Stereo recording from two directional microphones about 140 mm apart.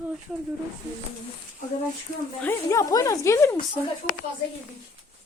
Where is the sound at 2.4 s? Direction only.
20° left (ahead or behind).